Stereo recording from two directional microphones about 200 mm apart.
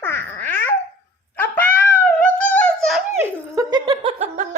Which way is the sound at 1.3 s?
10° left (ahead or behind).